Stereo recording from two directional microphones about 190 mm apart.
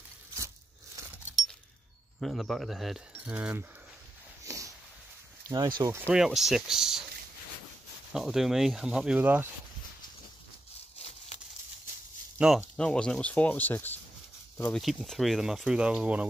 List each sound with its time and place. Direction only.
2.1 s speech: centre (ahead or behind)
4.5 s a sound: 15° right (ahead or behind)
5.8 s speech: 15° right (ahead or behind)
8.1 s speech: centre (ahead or behind)
11.1 s a sound: 35° left (ahead or behind)
12.4 s speech: 5° right (ahead or behind)